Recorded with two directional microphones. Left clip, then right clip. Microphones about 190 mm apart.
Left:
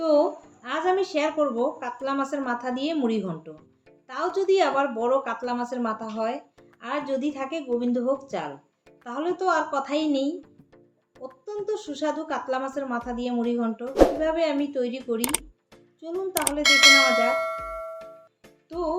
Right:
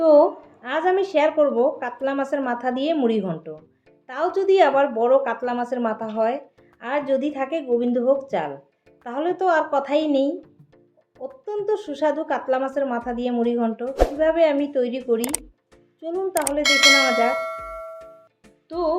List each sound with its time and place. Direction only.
0.0 s a woman's voice: 10° right (ahead or behind)
16.0 s clang: 5° right (ahead or behind)
18.7 s a woman's voice: 15° right (ahead or behind)